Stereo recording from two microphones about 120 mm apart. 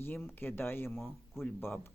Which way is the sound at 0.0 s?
15° left (ahead or behind).